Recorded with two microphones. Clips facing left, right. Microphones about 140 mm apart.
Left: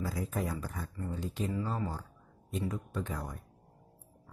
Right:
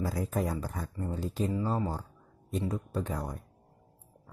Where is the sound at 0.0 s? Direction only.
40° right (ahead or behind).